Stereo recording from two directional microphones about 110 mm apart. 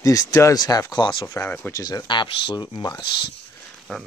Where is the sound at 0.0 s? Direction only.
30° left (ahead or behind).